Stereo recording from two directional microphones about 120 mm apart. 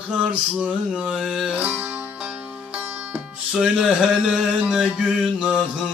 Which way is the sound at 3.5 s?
5° right (ahead or behind).